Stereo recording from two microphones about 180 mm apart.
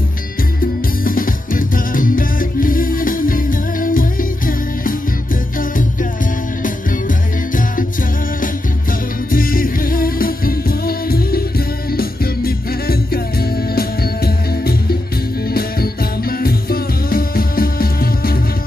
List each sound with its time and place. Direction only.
1.0 s music: 50° left (ahead or behind)
6.6 s music: 50° left (ahead or behind)
9.3 s music: 50° left (ahead or behind)